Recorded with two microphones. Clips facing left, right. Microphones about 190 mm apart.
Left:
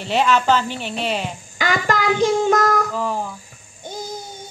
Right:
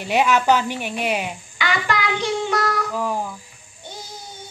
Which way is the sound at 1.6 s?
45° left (ahead or behind).